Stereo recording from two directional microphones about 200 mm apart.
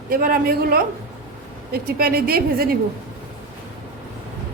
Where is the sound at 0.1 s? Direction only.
45° right (ahead or behind).